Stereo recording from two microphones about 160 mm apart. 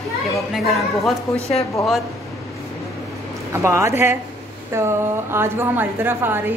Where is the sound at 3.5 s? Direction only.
20° right (ahead or behind).